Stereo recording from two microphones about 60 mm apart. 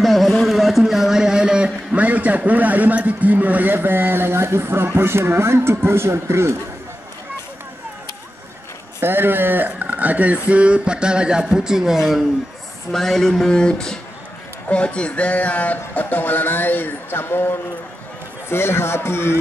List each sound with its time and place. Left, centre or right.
0.0 s a sound: centre
2.0 s a man's voice: right
9.0 s a man's voice: right; by 12.2 s centre
12.9 s speech: centre; by 19.3 s left